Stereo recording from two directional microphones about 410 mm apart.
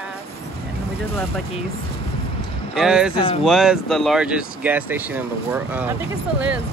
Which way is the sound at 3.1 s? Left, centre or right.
Centre.